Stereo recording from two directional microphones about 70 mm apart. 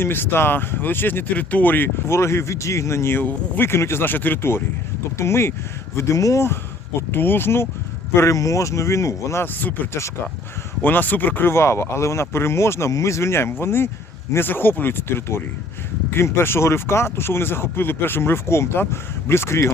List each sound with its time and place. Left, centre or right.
0.0 s speech: left
2.0 s speech: left
3.7 s speech: left
7.1 s speech: left
8.1 s speech: left
9.4 s speech: left
10.8 s speech: left